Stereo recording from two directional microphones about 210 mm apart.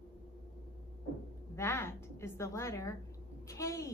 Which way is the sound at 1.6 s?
10° left (ahead or behind).